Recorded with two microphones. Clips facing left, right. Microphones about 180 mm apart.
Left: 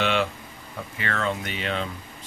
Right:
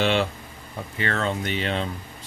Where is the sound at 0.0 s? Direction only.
35° right (ahead or behind).